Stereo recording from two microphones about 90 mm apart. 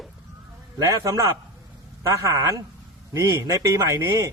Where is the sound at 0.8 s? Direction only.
35° right (ahead or behind).